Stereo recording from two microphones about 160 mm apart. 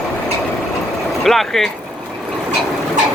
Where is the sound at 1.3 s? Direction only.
Centre (ahead or behind).